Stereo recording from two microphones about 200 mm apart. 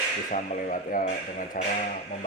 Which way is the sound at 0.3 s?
40° left (ahead or behind).